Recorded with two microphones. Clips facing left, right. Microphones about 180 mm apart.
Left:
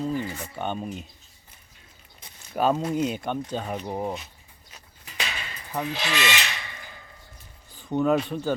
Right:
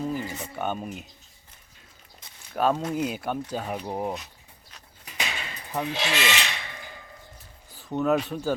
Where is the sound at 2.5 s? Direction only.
Centre (ahead or behind).